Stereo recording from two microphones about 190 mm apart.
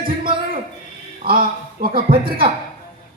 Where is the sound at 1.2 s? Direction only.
50° right (ahead or behind).